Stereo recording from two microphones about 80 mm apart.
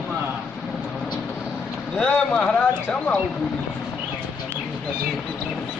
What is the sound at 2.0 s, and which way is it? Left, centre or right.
Speech, centre.